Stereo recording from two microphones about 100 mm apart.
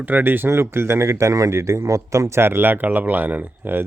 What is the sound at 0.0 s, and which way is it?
Speech, 20° right (ahead or behind).